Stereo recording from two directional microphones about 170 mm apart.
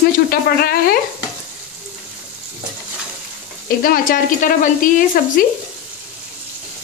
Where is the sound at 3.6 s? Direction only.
60° left (ahead or behind).